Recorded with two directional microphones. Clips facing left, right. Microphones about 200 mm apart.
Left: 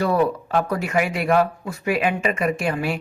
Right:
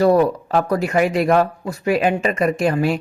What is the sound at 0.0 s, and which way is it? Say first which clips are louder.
Speech: right 5 dB; 40° right (ahead or behind).